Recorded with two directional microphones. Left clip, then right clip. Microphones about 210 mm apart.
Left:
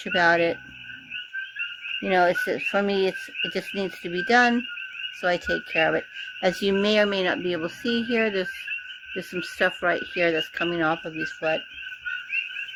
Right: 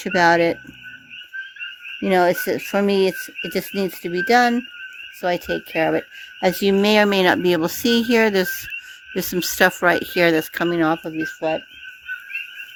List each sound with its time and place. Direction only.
0.0 s speech: 50° right (ahead or behind)
2.0 s speech: 50° right (ahead or behind)